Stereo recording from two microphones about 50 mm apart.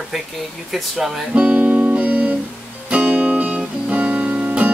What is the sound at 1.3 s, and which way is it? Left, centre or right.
Music, right.